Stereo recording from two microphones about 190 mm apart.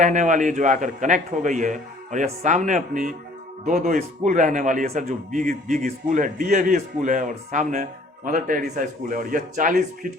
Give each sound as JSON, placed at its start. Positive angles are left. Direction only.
{"t": 0.0, "sound": "a man's voice", "side_deg": -40}